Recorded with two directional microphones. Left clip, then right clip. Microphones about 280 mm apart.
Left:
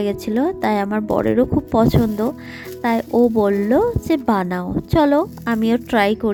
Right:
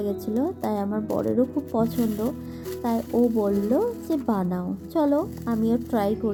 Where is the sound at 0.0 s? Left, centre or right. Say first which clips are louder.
Left 7 dB; left.